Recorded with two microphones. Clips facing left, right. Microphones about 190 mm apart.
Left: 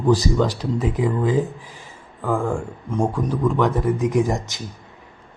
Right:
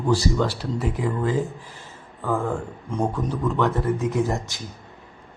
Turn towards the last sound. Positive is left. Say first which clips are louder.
# left 3 dB
turn(degrees=15)  # may be behind; listen again after turning